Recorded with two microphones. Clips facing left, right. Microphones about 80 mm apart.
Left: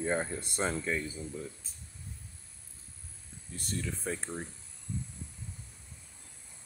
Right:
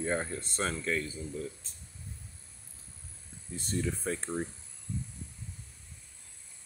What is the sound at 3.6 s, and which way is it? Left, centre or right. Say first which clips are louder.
Speech: right 4 dB; right.